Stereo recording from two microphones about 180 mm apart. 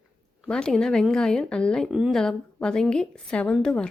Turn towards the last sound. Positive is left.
turn(degrees=5)  # may be behind; listen again after turning